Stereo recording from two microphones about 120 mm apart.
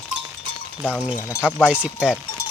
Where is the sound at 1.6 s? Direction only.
10° right (ahead or behind).